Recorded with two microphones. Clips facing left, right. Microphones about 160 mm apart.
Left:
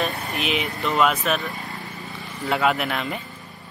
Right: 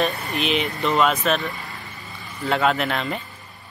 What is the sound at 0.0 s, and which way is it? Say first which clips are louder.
Speech: right 3 dB; centre (ahead or behind).